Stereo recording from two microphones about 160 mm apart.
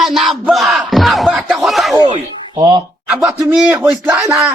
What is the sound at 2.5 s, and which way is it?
Speech, 25° right (ahead or behind).